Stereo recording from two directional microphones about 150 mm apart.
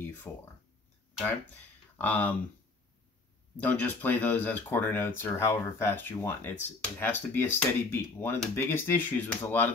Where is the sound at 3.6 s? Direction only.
10° left (ahead or behind).